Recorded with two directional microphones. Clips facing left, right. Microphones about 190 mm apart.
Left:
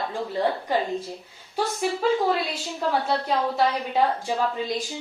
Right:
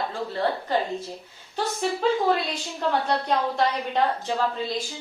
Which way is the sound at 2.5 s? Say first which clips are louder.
Even; 5° left (ahead or behind).